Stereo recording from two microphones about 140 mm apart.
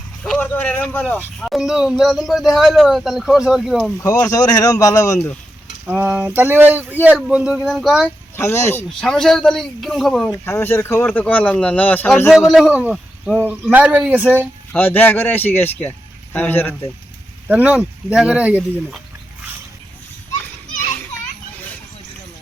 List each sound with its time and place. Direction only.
0.2 s speech: 10° left (ahead or behind)
1.4 s speech: centre (ahead or behind)
4.0 s speech: 25° left (ahead or behind)
5.8 s speech: 10° right (ahead or behind)
8.0 s speech: 20° left (ahead or behind)
9.0 s speech: 5° left (ahead or behind)
10.3 s speech: 15° left (ahead or behind)
12.3 s speech: 5° right (ahead or behind)
14.7 s speech: 10° left (ahead or behind)
17.5 s speech: 10° right (ahead or behind)